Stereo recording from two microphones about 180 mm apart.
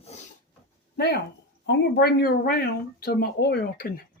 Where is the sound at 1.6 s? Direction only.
60° left (ahead or behind).